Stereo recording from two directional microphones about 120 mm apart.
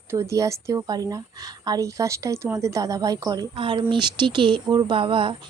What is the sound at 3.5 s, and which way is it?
Speech, 45° right (ahead or behind).